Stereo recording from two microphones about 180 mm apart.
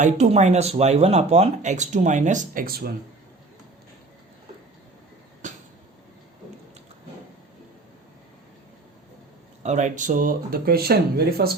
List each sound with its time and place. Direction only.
0.0 s speech: 40° right (ahead or behind); by 2.9 s 55° right (ahead or behind)
9.6 s speech: 40° right (ahead or behind); by 11.5 s 60° right (ahead or behind)